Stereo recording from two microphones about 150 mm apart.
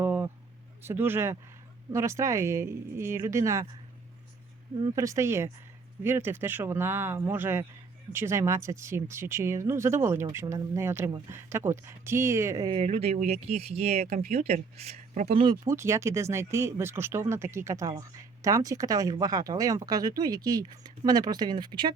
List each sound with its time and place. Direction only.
0.0 s a sound: 15° right (ahead or behind)
0.8 s speech: 15° right (ahead or behind)
4.8 s speech: 20° right (ahead or behind)
12.8 s speech: 45° right (ahead or behind)
15.3 s speech: 35° right (ahead or behind)
15.6 s speech: 20° right (ahead or behind)